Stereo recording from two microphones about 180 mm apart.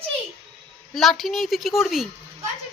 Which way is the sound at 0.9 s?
Centre (ahead or behind).